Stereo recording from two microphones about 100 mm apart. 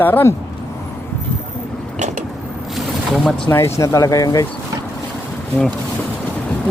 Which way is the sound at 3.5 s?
30° left (ahead or behind).